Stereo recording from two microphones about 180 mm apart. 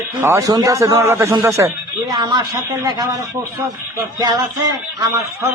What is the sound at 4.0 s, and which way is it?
Speech, 20° right (ahead or behind).